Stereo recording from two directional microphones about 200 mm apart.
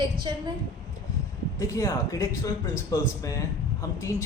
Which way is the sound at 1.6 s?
15° left (ahead or behind).